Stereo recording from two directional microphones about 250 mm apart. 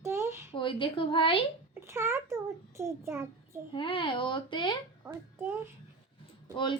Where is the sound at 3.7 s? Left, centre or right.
Centre.